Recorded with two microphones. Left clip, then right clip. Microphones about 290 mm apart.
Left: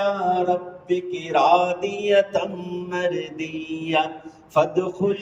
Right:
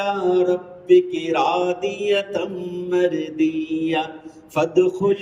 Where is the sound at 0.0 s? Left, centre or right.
Centre.